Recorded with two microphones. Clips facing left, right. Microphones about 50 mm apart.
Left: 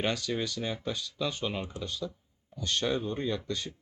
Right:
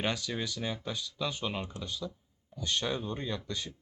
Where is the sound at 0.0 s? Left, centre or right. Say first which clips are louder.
Left 3 dB; centre.